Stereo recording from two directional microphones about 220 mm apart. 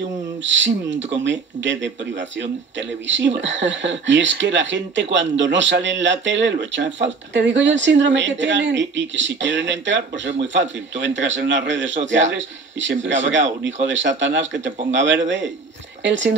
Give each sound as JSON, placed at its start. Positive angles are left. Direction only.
{"t": 0.4, "sound": "speech", "side_deg": -55}